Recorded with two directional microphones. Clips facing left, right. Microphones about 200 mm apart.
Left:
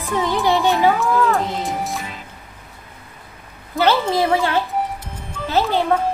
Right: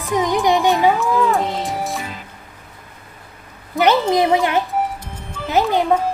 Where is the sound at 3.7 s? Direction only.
15° right (ahead or behind).